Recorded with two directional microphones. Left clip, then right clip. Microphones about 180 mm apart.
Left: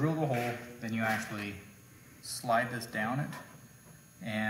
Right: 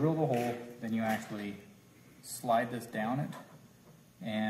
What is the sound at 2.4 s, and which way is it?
Speech, 20° right (ahead or behind).